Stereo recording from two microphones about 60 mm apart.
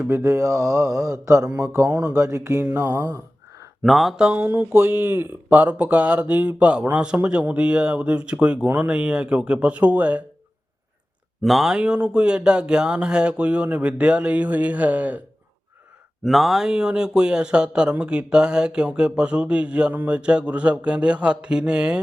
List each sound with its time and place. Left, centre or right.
0.0 s mantra: right
3.8 s speech: centre
4.4 s speech: right
5.5 s speech: right
11.4 s speech: centre
11.7 s speech: centre
16.2 s speech: centre